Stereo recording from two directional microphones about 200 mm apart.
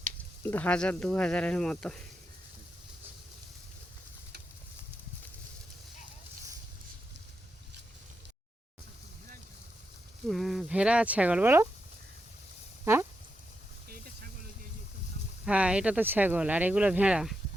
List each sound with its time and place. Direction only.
0.4 s speech: 10° left (ahead or behind)
10.2 s speech: centre (ahead or behind)
12.8 s a sound: 10° right (ahead or behind)
13.8 s vehicle: 50° right (ahead or behind)
15.4 s speech: 5° right (ahead or behind)